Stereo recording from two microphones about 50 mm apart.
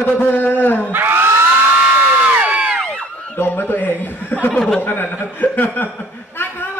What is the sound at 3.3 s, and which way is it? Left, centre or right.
Speech, left.